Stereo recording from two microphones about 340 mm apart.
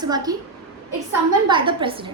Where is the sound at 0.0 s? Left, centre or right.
Centre.